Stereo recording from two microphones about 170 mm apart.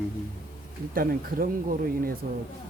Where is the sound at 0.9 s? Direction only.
55° right (ahead or behind).